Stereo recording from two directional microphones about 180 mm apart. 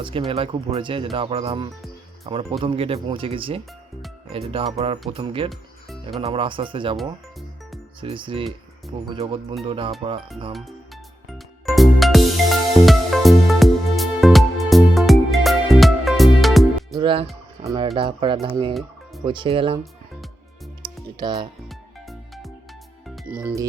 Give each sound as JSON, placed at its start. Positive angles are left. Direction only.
{"t": 0.0, "sound": "speech", "side_deg": -30}
{"t": 5.5, "sound": "music", "side_deg": 0}
{"t": 6.2, "sound": "speech", "side_deg": -30}
{"t": 6.9, "sound": "music", "side_deg": 0}
{"t": 8.0, "sound": "speech", "side_deg": -30}
{"t": 11.3, "sound": "music", "side_deg": 0}
{"t": 16.9, "sound": "speech", "side_deg": -25}
{"t": 18.7, "sound": "music", "side_deg": 0}
{"t": 19.2, "sound": "speech", "side_deg": -25}
{"t": 20.8, "sound": "music", "side_deg": -25}
{"t": 21.7, "sound": "music", "side_deg": 0}